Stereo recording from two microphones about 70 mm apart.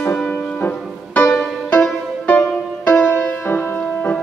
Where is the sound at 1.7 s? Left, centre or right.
Left.